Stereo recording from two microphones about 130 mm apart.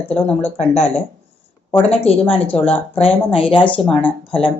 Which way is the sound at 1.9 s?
50° left (ahead or behind).